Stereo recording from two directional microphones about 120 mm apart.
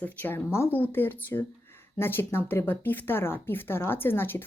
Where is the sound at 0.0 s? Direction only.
15° left (ahead or behind).